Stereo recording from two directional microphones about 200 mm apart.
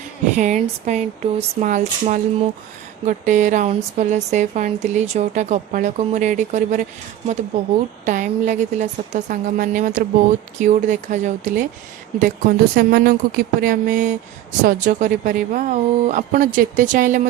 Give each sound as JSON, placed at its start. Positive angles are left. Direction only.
{"t": 0.3, "sound": "a woman's voice", "side_deg": -35}
{"t": 8.0, "sound": "a woman's voice", "side_deg": -40}